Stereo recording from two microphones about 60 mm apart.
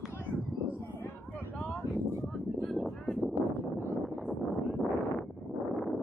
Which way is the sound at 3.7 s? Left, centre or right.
Left.